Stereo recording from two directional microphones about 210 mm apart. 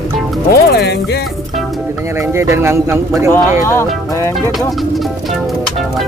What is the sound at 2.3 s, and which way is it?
Speech, 15° right (ahead or behind).